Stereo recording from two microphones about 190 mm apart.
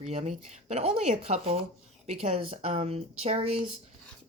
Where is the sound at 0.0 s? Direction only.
35° right (ahead or behind).